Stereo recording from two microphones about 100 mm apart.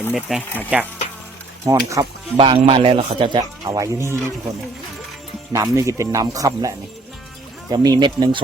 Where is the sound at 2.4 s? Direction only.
65° right (ahead or behind).